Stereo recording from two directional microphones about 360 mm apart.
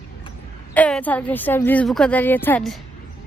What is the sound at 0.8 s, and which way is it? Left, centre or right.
A woman's voice, centre.